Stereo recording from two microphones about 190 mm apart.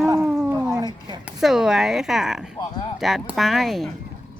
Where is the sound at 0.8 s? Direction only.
25° right (ahead or behind).